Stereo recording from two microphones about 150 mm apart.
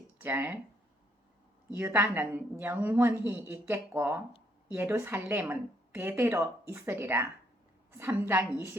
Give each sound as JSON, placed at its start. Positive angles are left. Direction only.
{"t": 0.2, "sound": "speech", "side_deg": -15}
{"t": 1.7, "sound": "speech", "side_deg": -15}
{"t": 8.3, "sound": "speech", "side_deg": -15}